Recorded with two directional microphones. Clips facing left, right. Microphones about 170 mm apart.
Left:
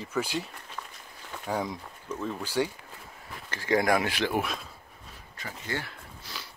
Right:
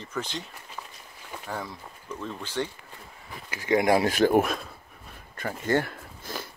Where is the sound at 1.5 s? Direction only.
15° left (ahead or behind).